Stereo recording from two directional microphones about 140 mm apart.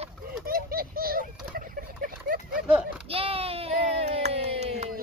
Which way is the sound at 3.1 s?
45° right (ahead or behind).